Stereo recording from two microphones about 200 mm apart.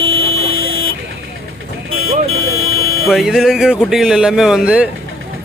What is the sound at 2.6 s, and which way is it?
Buzzer, 90° right.